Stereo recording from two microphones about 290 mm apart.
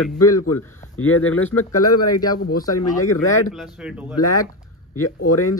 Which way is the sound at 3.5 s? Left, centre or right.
Centre.